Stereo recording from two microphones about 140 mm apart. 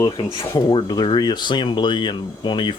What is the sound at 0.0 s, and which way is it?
Speech, 25° left (ahead or behind).